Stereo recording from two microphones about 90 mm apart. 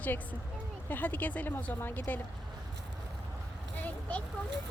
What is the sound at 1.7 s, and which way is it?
Speech, 25° left (ahead or behind).